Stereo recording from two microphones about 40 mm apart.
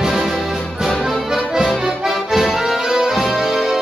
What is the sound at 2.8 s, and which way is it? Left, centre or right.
Music, centre.